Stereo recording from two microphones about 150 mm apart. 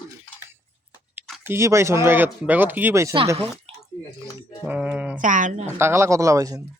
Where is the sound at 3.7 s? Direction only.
40° right (ahead or behind).